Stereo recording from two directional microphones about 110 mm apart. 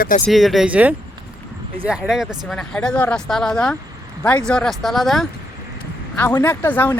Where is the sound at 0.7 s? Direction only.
15° right (ahead or behind).